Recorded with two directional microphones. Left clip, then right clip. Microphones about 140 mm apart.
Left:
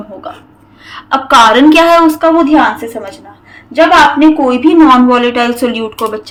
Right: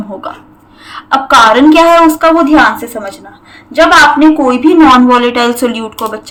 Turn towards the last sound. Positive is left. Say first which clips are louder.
# right 1 dB
turn(degrees=-10)  # may be behind; listen again after turning